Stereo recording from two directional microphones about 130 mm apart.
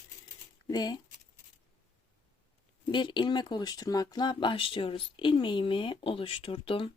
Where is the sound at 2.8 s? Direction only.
35° left (ahead or behind).